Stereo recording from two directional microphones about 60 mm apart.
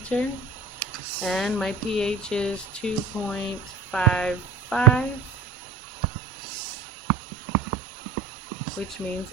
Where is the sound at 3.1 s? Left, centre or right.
Right.